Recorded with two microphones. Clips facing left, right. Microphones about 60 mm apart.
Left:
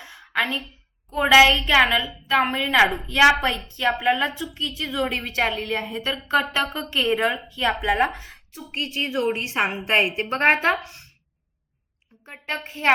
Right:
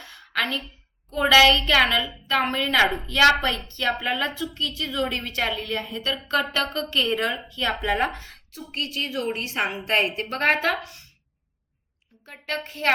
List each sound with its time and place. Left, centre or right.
0.0 s a sound: centre
1.1 s a woman's voice: centre
8.5 s a woman's voice: left
12.2 s a woman's voice: left